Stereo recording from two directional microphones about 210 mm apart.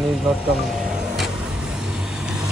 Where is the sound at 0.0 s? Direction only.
Centre (ahead or behind).